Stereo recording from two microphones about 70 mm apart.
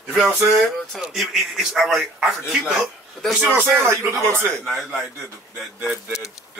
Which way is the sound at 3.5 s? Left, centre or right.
Right.